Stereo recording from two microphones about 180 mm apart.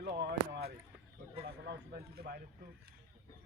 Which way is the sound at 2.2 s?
55° right (ahead or behind).